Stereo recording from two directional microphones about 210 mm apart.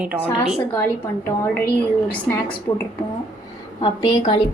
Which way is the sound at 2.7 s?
20° left (ahead or behind).